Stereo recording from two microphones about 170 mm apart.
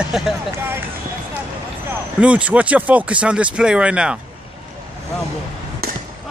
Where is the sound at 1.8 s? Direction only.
5° right (ahead or behind).